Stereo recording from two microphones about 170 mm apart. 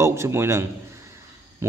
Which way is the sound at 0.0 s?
15° right (ahead or behind).